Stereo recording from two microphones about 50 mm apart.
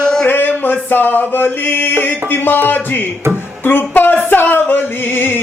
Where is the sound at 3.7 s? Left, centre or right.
Left.